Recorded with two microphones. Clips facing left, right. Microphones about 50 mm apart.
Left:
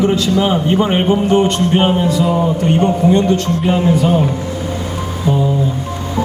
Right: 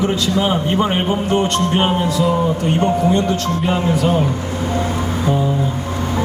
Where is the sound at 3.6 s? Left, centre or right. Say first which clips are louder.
Left 2 dB; centre.